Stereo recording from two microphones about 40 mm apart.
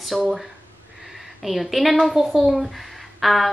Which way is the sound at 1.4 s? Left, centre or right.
Centre.